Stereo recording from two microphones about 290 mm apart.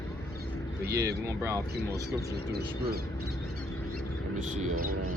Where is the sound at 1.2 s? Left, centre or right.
Centre.